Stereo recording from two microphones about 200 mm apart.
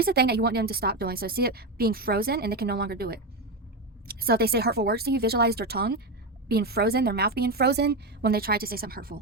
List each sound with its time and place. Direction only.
0.0 s a woman's voice: 50° right (ahead or behind)